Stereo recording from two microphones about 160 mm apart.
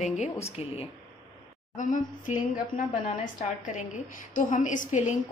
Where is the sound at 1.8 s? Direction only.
55° left (ahead or behind).